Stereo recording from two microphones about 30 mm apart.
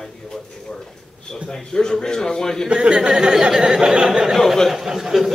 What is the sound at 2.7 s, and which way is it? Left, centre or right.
Speech, right.